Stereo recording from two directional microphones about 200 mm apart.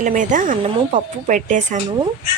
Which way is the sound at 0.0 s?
40° right (ahead or behind).